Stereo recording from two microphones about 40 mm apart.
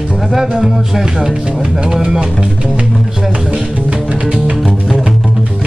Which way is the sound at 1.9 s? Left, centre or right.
Centre.